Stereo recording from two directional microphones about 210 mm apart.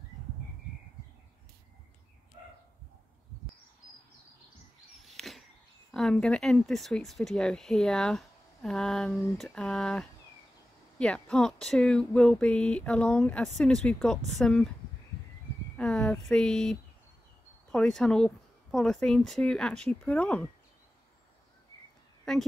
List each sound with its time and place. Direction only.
5.0 s a sound: centre (ahead or behind)
5.9 s speech: centre (ahead or behind)
15.8 s speech: 5° left (ahead or behind)
22.2 s speech: centre (ahead or behind)